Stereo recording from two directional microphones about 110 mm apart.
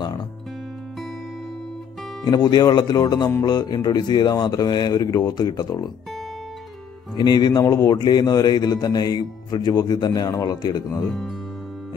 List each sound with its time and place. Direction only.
2.2 s a man's voice: 40° left (ahead or behind)
7.2 s a man's voice: 40° left (ahead or behind)
11.1 s speech: centre (ahead or behind)